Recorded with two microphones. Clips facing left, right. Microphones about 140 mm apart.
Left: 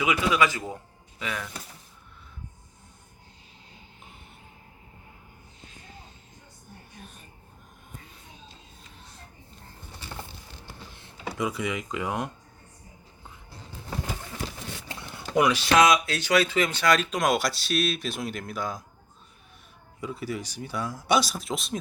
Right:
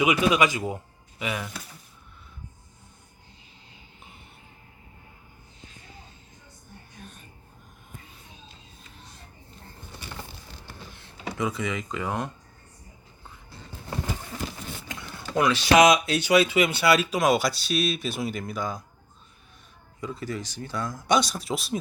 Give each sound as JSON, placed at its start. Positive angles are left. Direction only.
{"t": 0.0, "sound": "a man's voice", "side_deg": -20}
{"t": 11.3, "sound": "speech", "side_deg": 10}
{"t": 14.8, "sound": "a sound", "side_deg": 30}
{"t": 15.7, "sound": "speech", "side_deg": -20}
{"t": 20.0, "sound": "speech", "side_deg": 10}